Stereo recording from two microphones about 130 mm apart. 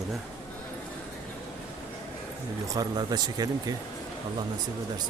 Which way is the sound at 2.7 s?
30° right (ahead or behind).